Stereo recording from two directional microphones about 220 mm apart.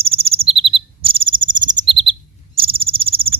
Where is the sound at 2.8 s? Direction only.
25° right (ahead or behind).